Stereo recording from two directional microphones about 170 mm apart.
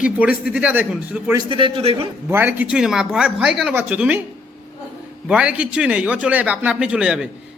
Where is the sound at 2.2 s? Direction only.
15° right (ahead or behind).